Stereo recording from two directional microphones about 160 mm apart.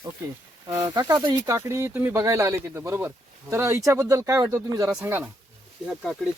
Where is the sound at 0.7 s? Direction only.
25° right (ahead or behind).